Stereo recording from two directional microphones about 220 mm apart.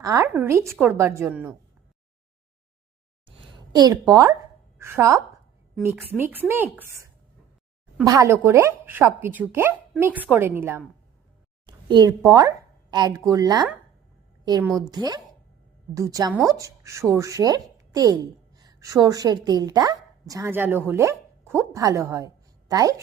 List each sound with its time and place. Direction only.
0.0 s a woman's voice: 15° right (ahead or behind)
3.8 s a woman's voice: 15° right (ahead or behind)
6.5 s a woman's voice: 10° right (ahead or behind)
8.0 s a woman's voice: 15° right (ahead or behind)
14.8 s a woman's voice: 20° right (ahead or behind)